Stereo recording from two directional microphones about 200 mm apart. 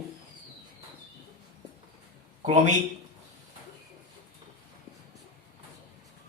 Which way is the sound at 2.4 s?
35° right (ahead or behind).